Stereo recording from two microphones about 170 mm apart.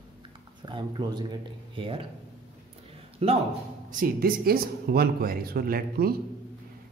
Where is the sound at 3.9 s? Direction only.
55° right (ahead or behind).